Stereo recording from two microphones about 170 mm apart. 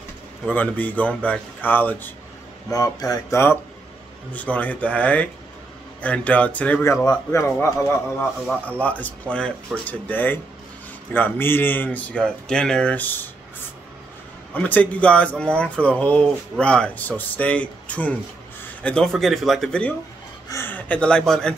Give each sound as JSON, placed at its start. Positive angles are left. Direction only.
{"t": 0.5, "sound": "speech", "side_deg": 10}
{"t": 14.5, "sound": "speech", "side_deg": 10}
{"t": 20.4, "sound": "speech", "side_deg": 15}